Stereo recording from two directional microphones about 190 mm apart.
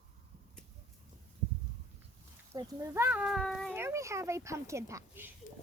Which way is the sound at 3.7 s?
15° right (ahead or behind).